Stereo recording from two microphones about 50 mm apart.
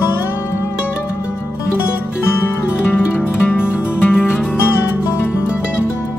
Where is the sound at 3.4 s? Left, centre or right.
Left.